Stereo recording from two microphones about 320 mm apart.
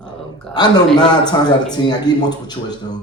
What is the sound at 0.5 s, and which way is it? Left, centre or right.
Speech, centre.